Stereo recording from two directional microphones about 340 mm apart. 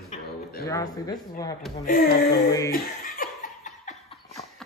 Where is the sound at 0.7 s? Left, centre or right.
Centre.